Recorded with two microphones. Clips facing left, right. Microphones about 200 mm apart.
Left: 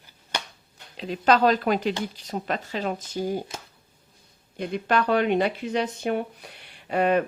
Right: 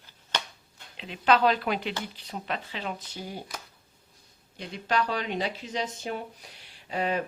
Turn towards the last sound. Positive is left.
turn(degrees=60)  # may be behind; listen again after turning